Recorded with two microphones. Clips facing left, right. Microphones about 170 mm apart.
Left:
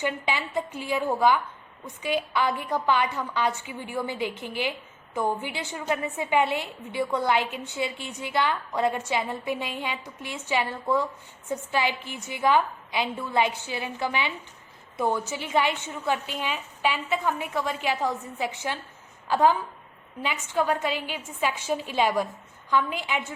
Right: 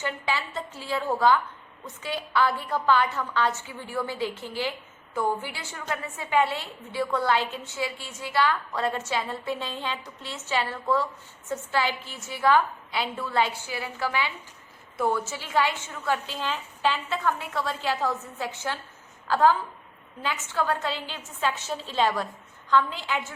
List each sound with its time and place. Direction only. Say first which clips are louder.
0.0 s a woman's voice: left 2 dB; 15° left (ahead or behind)